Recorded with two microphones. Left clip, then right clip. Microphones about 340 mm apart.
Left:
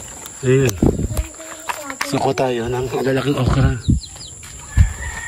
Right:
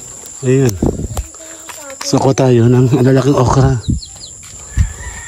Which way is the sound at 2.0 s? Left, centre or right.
Centre.